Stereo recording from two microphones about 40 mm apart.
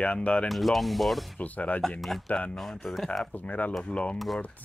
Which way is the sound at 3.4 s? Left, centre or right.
Left.